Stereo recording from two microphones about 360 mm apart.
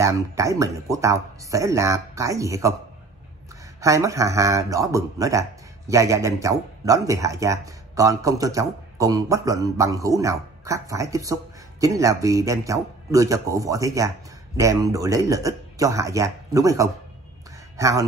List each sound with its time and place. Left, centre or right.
0.0 s speech: centre
3.8 s speech: centre